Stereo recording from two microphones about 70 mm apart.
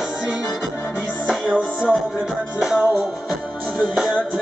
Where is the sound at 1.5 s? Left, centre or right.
Centre.